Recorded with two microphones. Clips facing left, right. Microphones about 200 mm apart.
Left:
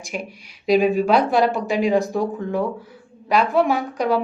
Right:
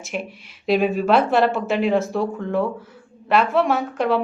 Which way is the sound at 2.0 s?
15° left (ahead or behind).